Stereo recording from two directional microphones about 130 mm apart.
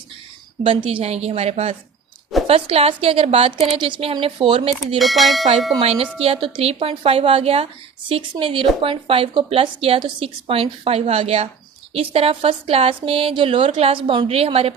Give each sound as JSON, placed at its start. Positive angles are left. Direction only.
{"t": 0.6, "sound": "speech", "side_deg": -45}
{"t": 4.9, "sound": "speech", "side_deg": 0}
{"t": 5.8, "sound": "speech", "side_deg": -55}